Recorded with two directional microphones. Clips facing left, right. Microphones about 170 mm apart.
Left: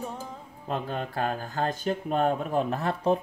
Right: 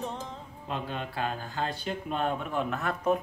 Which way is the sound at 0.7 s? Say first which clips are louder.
Left 4 dB; 40° left (ahead or behind).